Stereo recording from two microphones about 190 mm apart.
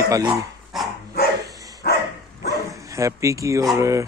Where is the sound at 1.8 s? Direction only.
60° left (ahead or behind).